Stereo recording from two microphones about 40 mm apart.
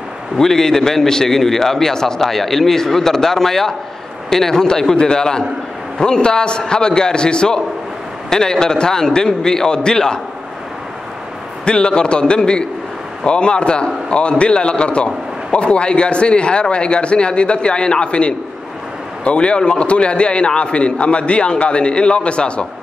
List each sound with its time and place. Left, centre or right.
0.4 s a man's voice: centre
11.6 s a man's voice: left